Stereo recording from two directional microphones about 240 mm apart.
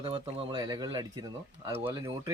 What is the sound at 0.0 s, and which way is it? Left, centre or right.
Speech, right.